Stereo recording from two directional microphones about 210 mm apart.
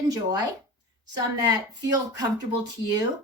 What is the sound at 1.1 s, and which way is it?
Speech, 20° right (ahead or behind).